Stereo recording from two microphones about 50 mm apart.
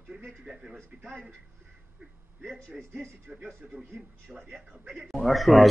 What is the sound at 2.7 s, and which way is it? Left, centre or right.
A man's voice, centre.